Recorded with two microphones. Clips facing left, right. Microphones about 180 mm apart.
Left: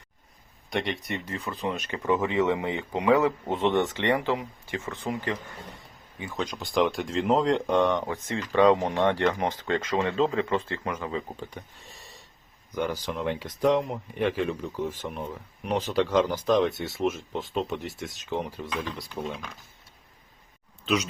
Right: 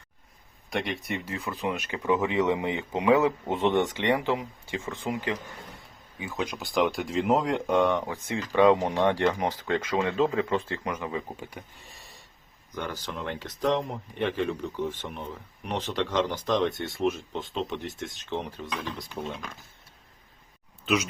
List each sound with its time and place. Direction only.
0.7 s speech: centre (ahead or behind)
8.0 s speech: 15° right (ahead or behind)
8.8 s speech: 20° left (ahead or behind)
9.0 s speech: 15° right (ahead or behind)
11.3 s speech: 5° right (ahead or behind)
12.7 s speech: 10° left (ahead or behind)
20.8 s speech: 5° right (ahead or behind)